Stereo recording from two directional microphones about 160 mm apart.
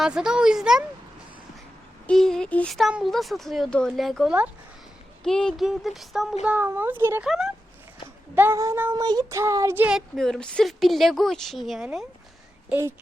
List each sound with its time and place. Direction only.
0.0 s speech: 5° right (ahead or behind)
2.0 s speech: 5° left (ahead or behind); by 7.3 s 15° right (ahead or behind)
7.3 s speech: centre (ahead or behind)
8.4 s speech: 15° right (ahead or behind)
10.2 s speech: 5° left (ahead or behind)
12.6 s speech: 15° right (ahead or behind)